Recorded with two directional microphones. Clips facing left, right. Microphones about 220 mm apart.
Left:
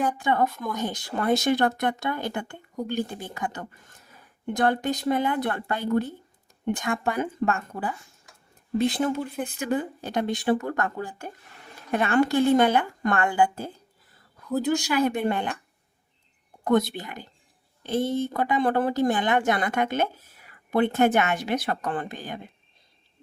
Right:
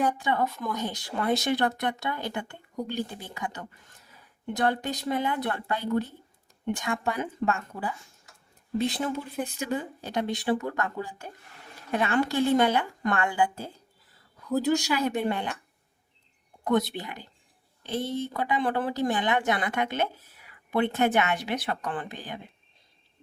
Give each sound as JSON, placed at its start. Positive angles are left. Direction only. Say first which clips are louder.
{"t": 0.2, "sound": "speech", "louder": "left 3 dB", "side_deg": 50}
{"t": 14.4, "sound": "a woman's voice", "louder": "even", "side_deg": 0}
{"t": 14.9, "sound": "speech", "louder": "left 3 dB", "side_deg": 55}
{"t": 16.6, "sound": "speech", "louder": "left 3 dB", "side_deg": 45}